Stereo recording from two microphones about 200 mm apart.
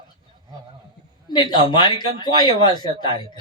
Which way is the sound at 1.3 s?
20° left (ahead or behind).